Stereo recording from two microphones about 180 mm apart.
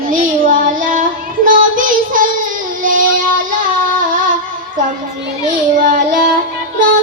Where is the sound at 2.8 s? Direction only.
50° right (ahead or behind).